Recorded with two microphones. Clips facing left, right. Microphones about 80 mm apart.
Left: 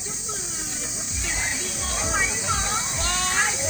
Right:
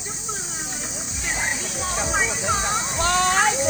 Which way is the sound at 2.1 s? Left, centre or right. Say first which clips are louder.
Right 2 dB; centre.